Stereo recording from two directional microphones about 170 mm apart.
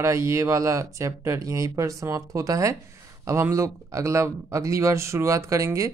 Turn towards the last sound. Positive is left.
turn(degrees=-15)  # may be behind; listen again after turning